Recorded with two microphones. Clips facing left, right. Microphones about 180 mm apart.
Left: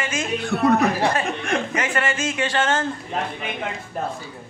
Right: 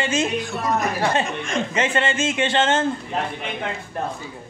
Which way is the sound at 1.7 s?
25° right (ahead or behind).